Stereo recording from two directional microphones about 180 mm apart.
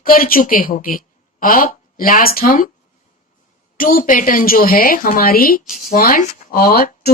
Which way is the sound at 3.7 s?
50° left (ahead or behind).